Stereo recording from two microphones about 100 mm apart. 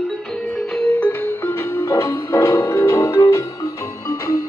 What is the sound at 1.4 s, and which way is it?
Music, 25° left (ahead or behind).